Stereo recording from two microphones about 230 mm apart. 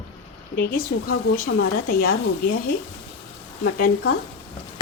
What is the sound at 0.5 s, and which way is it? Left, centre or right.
A woman's voice, left.